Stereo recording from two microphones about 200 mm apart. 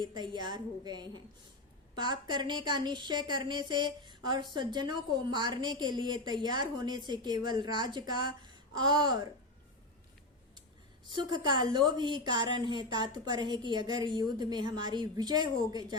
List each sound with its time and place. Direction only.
0.0 s a woman's voice: 20° right (ahead or behind)
11.1 s a woman's voice: 20° right (ahead or behind)